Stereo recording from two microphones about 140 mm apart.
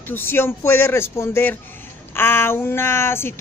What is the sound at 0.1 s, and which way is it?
Speech, 15° left (ahead or behind).